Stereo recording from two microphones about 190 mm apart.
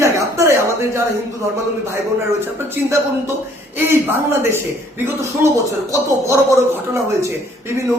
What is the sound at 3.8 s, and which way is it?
Speech, 10° right (ahead or behind).